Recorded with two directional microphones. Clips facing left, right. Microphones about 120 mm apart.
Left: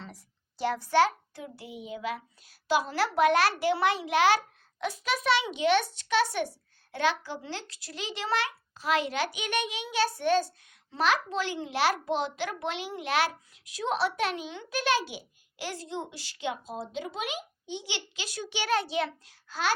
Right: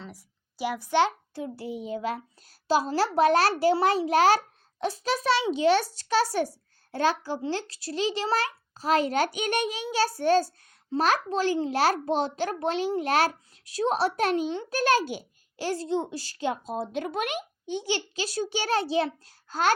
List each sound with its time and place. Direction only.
0.0 s a child's voice: 5° right (ahead or behind); by 19.7 s 45° right (ahead or behind)